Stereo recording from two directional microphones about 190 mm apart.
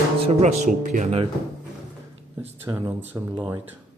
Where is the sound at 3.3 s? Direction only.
25° right (ahead or behind).